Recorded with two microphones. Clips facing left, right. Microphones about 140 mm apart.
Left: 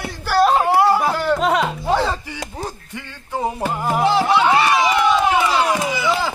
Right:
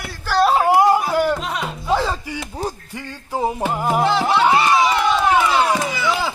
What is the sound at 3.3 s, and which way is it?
Music, 10° right (ahead or behind).